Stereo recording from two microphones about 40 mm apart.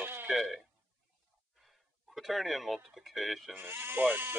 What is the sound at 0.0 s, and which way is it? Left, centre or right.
Throat clearing, right.